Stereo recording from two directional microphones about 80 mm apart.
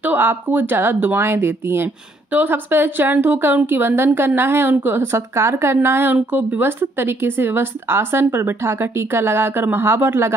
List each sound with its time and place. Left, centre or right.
0.0 s speech: right